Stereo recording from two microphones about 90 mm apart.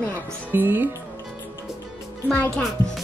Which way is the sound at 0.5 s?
20° right (ahead or behind).